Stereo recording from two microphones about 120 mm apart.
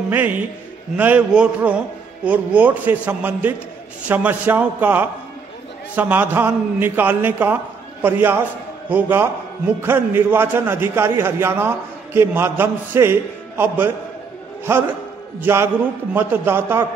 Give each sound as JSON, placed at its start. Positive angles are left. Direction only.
{"t": 0.1, "sound": "a man's voice", "side_deg": -15}